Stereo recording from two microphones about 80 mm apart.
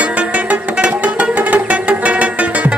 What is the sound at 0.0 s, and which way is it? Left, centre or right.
Music, centre.